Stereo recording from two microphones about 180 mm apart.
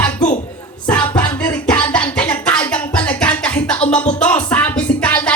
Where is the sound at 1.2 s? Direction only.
25° left (ahead or behind).